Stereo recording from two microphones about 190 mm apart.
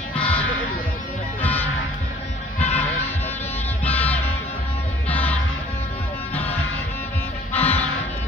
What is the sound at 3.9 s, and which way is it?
Music, 10° left (ahead or behind).